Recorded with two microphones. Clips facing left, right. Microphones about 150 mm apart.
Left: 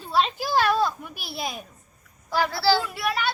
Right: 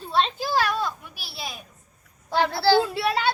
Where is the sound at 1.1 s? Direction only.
50° left (ahead or behind).